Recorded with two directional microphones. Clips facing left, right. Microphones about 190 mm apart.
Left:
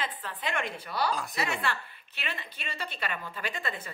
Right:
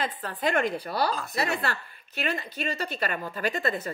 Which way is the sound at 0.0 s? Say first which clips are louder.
Right 7 dB; 40° right (ahead or behind).